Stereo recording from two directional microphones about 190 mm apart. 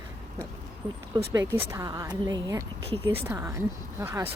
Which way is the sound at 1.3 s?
10° right (ahead or behind).